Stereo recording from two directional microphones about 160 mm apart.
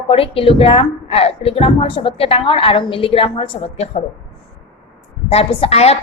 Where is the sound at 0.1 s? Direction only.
35° left (ahead or behind).